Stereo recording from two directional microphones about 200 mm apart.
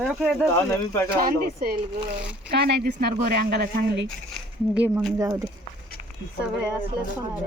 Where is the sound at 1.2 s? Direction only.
50° right (ahead or behind).